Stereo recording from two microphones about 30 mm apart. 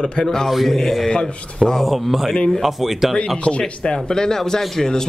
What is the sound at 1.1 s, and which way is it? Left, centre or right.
Speech, left.